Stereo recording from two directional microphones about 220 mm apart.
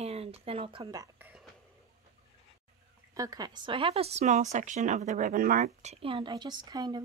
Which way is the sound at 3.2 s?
15° right (ahead or behind).